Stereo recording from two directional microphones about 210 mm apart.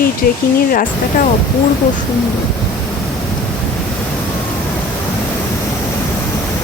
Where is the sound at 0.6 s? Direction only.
40° left (ahead or behind).